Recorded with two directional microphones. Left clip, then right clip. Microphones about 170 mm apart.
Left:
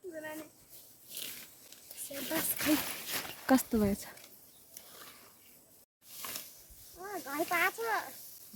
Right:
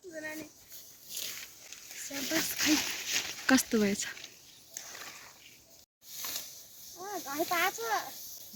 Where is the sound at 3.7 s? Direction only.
5° left (ahead or behind).